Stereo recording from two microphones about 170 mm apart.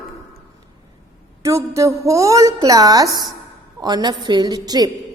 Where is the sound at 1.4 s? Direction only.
20° right (ahead or behind).